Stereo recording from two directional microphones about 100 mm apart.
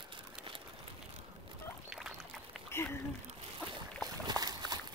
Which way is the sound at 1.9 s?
5° right (ahead or behind).